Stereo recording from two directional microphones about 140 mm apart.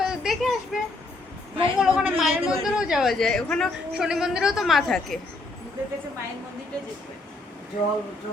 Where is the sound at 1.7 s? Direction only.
5° right (ahead or behind).